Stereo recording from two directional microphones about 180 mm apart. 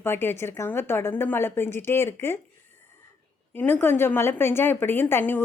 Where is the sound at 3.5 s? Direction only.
10° left (ahead or behind).